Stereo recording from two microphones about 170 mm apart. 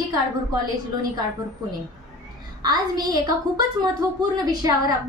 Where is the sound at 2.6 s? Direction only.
25° right (ahead or behind).